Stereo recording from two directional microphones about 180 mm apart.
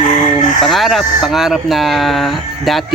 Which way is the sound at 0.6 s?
Centre (ahead or behind).